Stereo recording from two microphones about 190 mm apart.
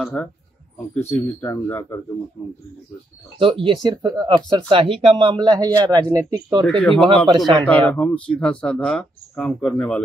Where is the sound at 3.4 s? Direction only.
25° right (ahead or behind).